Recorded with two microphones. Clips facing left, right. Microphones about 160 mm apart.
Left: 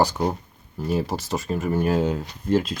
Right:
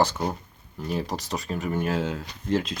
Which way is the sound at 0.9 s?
5° left (ahead or behind).